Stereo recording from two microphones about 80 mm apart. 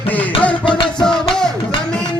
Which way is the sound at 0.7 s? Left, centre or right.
Left.